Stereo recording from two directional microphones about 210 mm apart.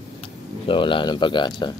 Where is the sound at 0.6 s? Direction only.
25° left (ahead or behind).